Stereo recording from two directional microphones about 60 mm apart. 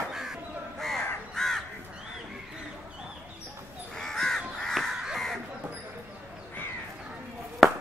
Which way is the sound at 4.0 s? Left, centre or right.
Centre.